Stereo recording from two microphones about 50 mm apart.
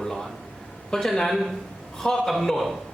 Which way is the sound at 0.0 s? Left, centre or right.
Centre.